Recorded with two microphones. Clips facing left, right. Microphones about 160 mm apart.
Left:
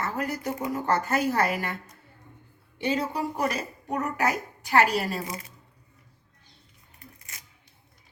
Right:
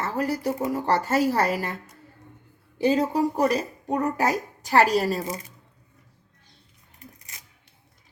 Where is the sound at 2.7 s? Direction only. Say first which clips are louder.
Right 6 dB; 35° right (ahead or behind).